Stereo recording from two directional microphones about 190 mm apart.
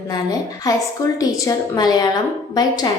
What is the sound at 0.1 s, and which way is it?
A woman's voice, 20° left (ahead or behind).